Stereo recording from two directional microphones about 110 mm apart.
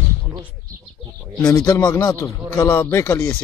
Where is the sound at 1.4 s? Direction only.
30° left (ahead or behind).